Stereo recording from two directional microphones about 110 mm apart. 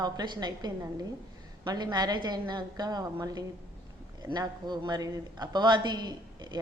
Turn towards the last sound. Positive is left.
turn(degrees=-40)  # may be behind; listen again after turning